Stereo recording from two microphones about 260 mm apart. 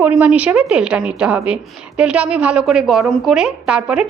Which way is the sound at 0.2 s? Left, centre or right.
Centre.